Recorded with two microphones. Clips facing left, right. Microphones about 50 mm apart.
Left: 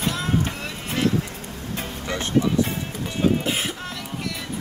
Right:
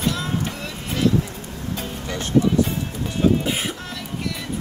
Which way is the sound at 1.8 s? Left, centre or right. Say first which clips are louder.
Left 3 dB; left.